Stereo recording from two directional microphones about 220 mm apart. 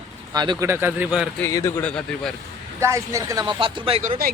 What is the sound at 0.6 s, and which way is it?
Speech, 10° right (ahead or behind).